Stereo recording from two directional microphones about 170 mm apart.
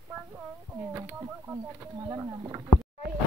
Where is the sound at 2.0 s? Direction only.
20° right (ahead or behind).